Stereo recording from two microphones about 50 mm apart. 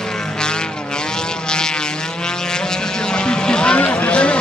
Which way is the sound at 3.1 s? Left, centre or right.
Centre.